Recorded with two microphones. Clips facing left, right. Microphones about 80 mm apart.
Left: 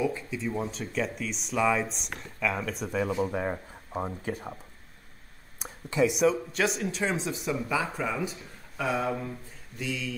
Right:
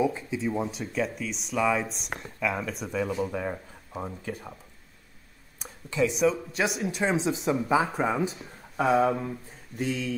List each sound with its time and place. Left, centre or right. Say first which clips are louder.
0.0 s a sound: right 3 dB; centre
0.5 s speech: right 1 dB; centre
2.9 s speech: left 1 dB; centre
5.6 s speech: left 1 dB; centre
6.8 s speech: right 3 dB; centre
9.8 s speech: right 4 dB; right